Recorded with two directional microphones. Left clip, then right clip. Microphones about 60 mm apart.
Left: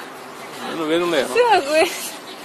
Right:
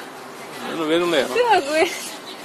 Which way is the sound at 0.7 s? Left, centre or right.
Centre.